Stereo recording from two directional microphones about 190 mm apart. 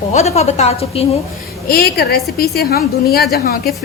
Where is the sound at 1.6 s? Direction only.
55° left (ahead or behind).